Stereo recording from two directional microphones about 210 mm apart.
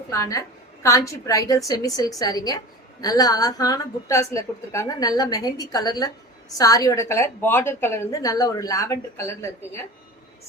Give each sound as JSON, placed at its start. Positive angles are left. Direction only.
{"t": 0.1, "sound": "a woman's voice", "side_deg": 15}